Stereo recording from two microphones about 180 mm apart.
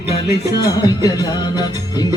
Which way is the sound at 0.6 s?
20° left (ahead or behind).